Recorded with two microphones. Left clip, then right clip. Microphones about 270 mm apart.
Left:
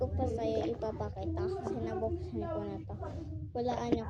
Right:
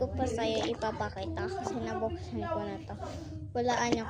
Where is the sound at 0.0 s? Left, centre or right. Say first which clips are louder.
Right 3 dB; centre.